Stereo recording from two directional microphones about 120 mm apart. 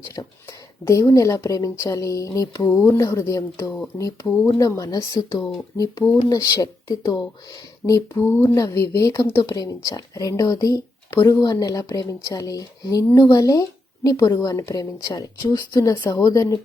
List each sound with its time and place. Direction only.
0.2 s a woman's voice: 30° left (ahead or behind)